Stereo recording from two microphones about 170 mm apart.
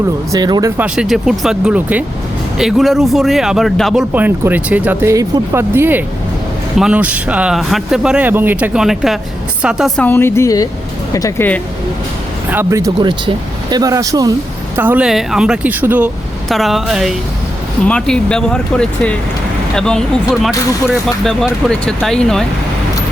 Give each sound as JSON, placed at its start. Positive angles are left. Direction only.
{"t": 0.3, "sound": "speech", "side_deg": -25}
{"t": 0.8, "sound": "speech", "side_deg": -5}
{"t": 4.1, "sound": "speech", "side_deg": -10}
{"t": 10.0, "sound": "speech", "side_deg": 10}
{"t": 12.5, "sound": "speech", "side_deg": -10}
{"t": 13.0, "sound": "speech", "side_deg": -25}
{"t": 14.8, "sound": "speech", "side_deg": -10}